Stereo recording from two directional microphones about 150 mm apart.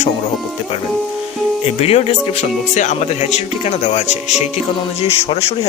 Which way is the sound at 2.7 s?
50° left (ahead or behind).